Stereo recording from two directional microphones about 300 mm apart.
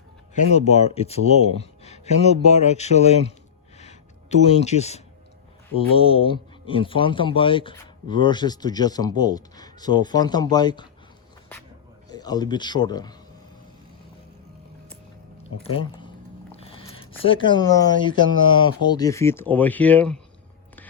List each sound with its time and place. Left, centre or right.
0.5 s speech: left
3.8 s a sound: left
5.7 s a man's voice: centre
12.0 s a man's voice: centre
15.6 s speech: centre